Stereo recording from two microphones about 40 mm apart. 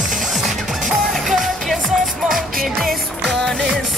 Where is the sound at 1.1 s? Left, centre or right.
Centre.